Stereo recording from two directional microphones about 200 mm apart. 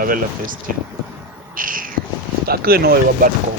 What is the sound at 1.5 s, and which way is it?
Cat, 45° right (ahead or behind).